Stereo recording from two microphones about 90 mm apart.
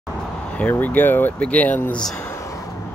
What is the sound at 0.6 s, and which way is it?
Speech, 20° left (ahead or behind).